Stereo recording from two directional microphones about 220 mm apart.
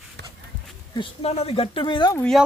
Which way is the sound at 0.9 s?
25° left (ahead or behind).